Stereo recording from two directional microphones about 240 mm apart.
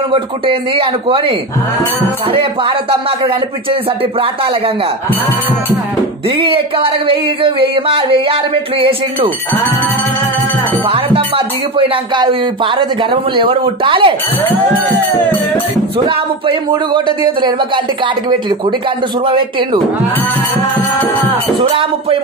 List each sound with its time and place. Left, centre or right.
0.1 s speech: right
6.4 s speech: right
10.9 s speech: right
16.4 s speech: centre
19.2 s speech: right